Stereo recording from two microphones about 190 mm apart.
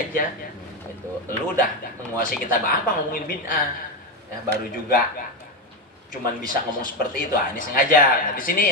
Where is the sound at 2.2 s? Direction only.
50° left (ahead or behind).